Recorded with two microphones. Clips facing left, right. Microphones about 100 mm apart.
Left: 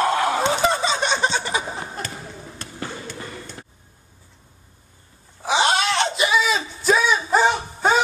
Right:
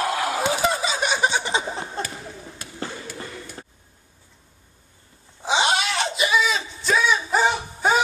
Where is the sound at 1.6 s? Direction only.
5° left (ahead or behind).